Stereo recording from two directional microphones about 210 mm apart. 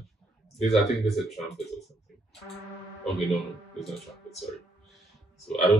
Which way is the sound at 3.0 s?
Centre (ahead or behind).